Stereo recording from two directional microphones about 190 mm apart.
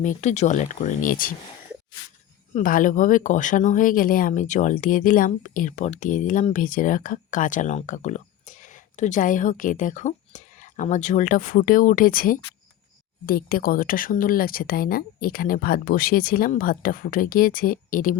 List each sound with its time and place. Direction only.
0.0 s speech: 40° left (ahead or behind)
2.5 s speech: 40° left (ahead or behind)